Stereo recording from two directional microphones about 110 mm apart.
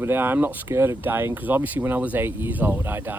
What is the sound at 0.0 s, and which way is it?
Speech, 20° right (ahead or behind).